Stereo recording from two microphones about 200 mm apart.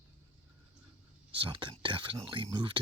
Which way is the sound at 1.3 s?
25° right (ahead or behind).